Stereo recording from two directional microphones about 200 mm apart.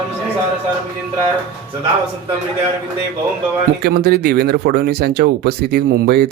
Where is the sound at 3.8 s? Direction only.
50° right (ahead or behind).